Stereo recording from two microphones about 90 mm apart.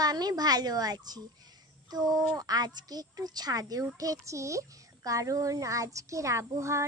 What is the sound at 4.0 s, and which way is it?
Child singing, 40° right (ahead or behind).